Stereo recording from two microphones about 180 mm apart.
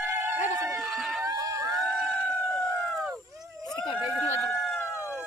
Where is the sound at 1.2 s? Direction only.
20° right (ahead or behind).